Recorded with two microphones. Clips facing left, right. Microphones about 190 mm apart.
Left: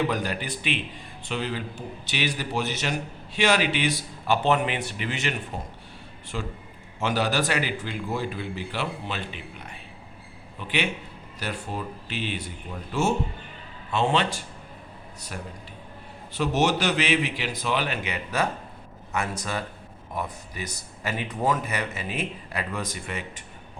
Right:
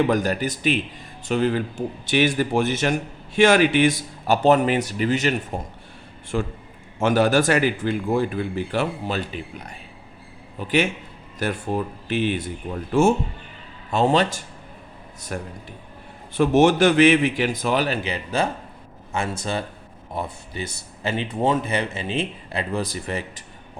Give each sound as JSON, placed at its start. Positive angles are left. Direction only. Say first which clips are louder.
{"t": 0.1, "sound": "a man's voice", "louder": "right 7 dB", "side_deg": -45}
{"t": 13.9, "sound": "a man's voice", "louder": "right 5 dB", "side_deg": -40}